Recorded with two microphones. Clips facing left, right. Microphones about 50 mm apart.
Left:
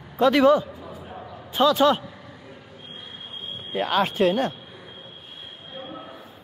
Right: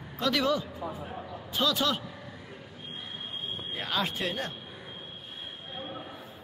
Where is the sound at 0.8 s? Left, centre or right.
Right.